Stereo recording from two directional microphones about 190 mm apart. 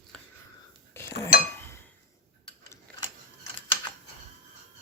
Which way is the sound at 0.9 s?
15° left (ahead or behind).